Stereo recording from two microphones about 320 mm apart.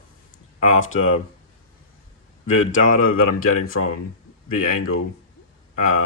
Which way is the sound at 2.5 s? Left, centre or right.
Left.